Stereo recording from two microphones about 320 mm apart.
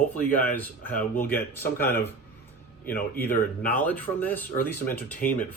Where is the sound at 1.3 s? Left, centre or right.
Centre.